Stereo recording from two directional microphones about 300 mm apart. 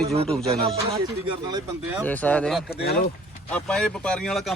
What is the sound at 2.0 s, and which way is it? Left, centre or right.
Speech, centre.